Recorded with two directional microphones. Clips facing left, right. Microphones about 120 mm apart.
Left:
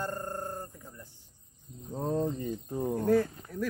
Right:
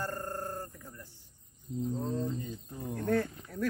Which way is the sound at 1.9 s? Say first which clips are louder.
Left 7 dB; 50° left (ahead or behind).